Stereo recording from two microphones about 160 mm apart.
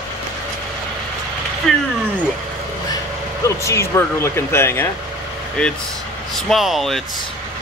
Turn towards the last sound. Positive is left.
turn(degrees=0)  # may be behind; listen again after turning